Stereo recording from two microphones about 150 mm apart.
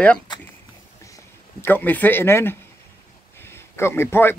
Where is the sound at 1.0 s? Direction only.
15° left (ahead or behind).